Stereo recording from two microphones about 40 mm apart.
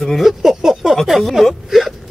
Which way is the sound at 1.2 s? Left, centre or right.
Centre.